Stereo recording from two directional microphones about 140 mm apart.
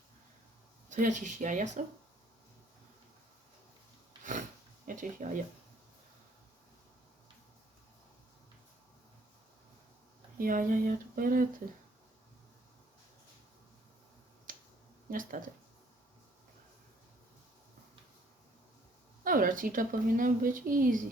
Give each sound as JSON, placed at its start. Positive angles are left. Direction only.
{"t": 0.9, "sound": "speech", "side_deg": -60}
{"t": 4.2, "sound": "a sound", "side_deg": -65}
{"t": 4.9, "sound": "a woman's voice", "side_deg": -70}
{"t": 10.3, "sound": "speech", "side_deg": -85}
{"t": 14.5, "sound": "finger snapping", "side_deg": -80}
{"t": 15.1, "sound": "a woman's voice", "side_deg": -75}
{"t": 19.2, "sound": "a woman's voice", "side_deg": -80}